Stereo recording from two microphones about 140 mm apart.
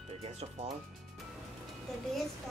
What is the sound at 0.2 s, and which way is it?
Speech, 50° right (ahead or behind).